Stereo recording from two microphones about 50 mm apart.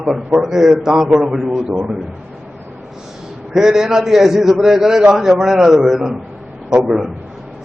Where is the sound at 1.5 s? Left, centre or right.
Right.